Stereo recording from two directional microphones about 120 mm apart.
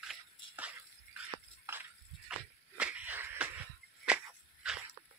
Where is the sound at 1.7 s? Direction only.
15° right (ahead or behind).